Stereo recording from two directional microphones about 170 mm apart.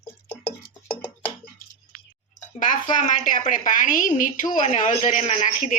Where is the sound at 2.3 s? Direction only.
50° left (ahead or behind).